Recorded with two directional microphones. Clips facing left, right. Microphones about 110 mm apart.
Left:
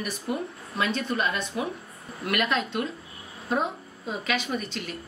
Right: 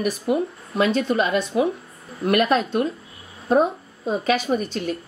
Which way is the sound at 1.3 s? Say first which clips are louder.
Right 10 dB; 20° right (ahead or behind).